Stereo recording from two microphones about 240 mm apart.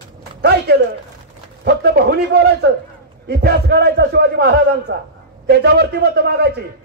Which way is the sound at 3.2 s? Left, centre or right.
Right.